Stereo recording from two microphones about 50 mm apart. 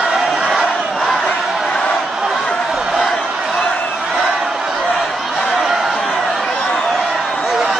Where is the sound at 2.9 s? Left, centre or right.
Centre.